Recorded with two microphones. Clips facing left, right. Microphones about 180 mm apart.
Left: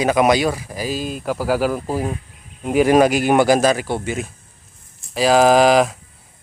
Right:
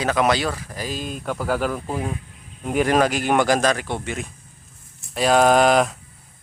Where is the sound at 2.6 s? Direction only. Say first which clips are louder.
Left 5 dB; 10° left (ahead or behind).